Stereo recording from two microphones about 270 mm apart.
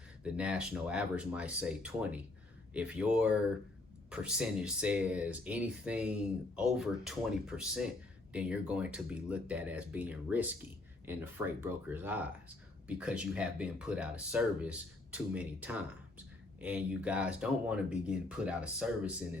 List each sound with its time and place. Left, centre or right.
0.3 s speech: centre